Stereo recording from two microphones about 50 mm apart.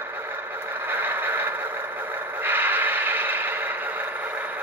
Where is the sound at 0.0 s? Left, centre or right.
Right.